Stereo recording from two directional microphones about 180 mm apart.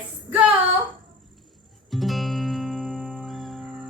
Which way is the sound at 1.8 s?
Centre (ahead or behind).